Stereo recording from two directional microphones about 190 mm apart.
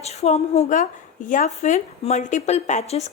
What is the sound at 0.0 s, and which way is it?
Speech, 35° left (ahead or behind).